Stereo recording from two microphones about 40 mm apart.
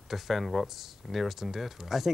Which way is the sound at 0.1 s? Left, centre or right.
Centre.